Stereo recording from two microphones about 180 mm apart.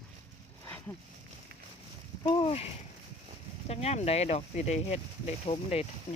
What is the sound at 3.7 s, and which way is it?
Speech, 35° left (ahead or behind).